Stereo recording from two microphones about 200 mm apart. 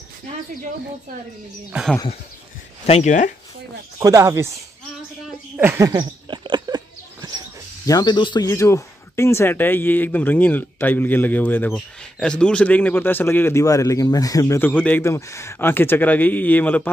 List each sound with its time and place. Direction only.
1.7 s speech: 5° right (ahead or behind)
2.9 s speech: 35° left (ahead or behind)
4.0 s speech: 15° right (ahead or behind)
5.6 s a sound: 10° right (ahead or behind)
7.8 s speech: 20° left (ahead or behind)